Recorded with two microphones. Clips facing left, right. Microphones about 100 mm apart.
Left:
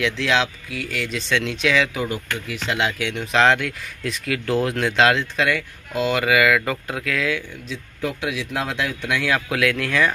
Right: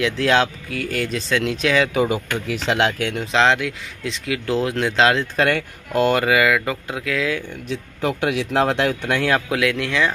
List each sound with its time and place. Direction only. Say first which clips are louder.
0.0 s speech: right 3 dB; 45° right (ahead or behind)
2.0 s speech: right 4 dB; 15° right (ahead or behind)
2.6 s speech: right 3 dB; 60° right (ahead or behind)
3.2 s speech: left 1 dB; 25° right (ahead or behind)
5.3 s speech: right 3 dB; 50° right (ahead or behind)
6.1 s speech: right 1 dB; 30° right (ahead or behind)
7.6 s speech: right 4 dB; 60° right (ahead or behind)
9.1 s speech: right 1 dB; 45° right (ahead or behind)
9.5 s speech: right 1 dB; 25° right (ahead or behind)